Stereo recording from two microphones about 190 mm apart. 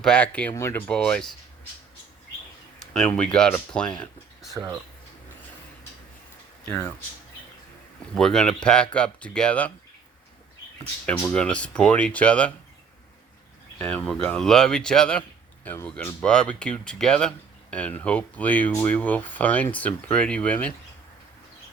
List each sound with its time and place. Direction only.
0.0 s speech: 5° left (ahead or behind)
2.7 s a sound: 5° left (ahead or behind)
3.3 s speech: 5° left (ahead or behind)
4.5 s speech: 15° right (ahead or behind)
8.1 s speech: 5° left (ahead or behind)
11.0 s speech: 10° left (ahead or behind)
13.7 s speech: 5° left (ahead or behind)